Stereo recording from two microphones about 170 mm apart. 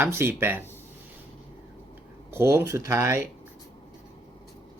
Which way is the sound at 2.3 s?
15° right (ahead or behind).